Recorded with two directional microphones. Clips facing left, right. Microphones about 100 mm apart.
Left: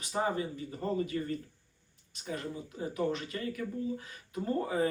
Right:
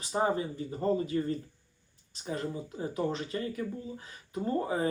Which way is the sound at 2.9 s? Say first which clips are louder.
Right 1 dB; 30° right (ahead or behind).